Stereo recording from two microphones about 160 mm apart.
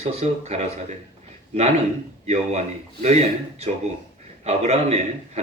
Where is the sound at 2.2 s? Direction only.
40° right (ahead or behind).